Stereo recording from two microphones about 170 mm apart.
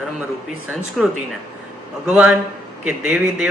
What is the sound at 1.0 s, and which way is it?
A man's voice, centre (ahead or behind).